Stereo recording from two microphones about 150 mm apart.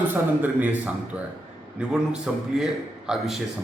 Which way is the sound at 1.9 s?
5° right (ahead or behind).